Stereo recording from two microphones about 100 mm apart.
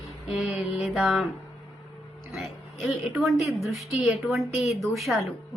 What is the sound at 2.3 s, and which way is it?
A woman's voice, centre (ahead or behind).